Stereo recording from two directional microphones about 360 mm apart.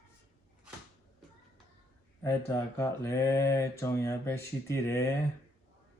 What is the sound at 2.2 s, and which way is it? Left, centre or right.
Mantra, centre.